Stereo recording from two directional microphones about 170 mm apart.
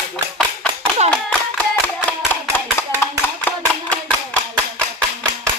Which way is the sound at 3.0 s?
10° left (ahead or behind).